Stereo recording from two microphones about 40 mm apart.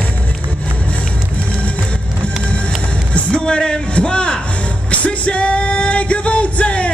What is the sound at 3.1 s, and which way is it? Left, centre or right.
Speech, left.